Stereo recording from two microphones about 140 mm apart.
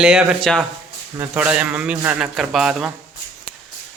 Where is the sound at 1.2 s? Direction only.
10° right (ahead or behind).